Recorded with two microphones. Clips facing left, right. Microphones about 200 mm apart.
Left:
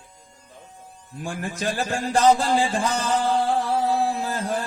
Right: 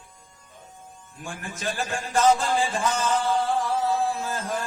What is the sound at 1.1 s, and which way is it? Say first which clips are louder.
A man's voice: left 6 dB; 35° left (ahead or behind).